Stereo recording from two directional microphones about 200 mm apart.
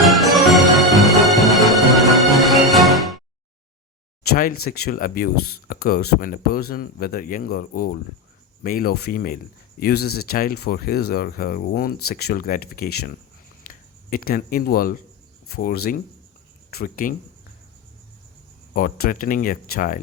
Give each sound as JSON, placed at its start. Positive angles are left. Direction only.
{"t": 0.1, "sound": "music", "side_deg": 0}
{"t": 4.2, "sound": "a sound", "side_deg": 45}
{"t": 4.6, "sound": "speech", "side_deg": 45}
{"t": 18.7, "sound": "speech", "side_deg": 45}